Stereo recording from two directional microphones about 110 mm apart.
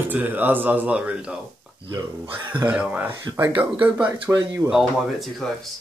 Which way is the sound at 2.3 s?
45° right (ahead or behind).